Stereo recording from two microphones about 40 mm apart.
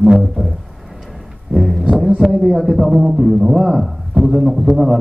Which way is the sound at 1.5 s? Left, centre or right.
Centre.